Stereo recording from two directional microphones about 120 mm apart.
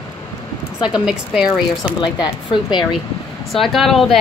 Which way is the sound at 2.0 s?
40° left (ahead or behind).